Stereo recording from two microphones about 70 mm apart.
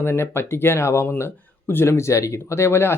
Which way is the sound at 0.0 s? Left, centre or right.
Left.